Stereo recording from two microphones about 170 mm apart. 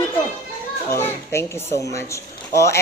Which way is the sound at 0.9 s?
15° left (ahead or behind).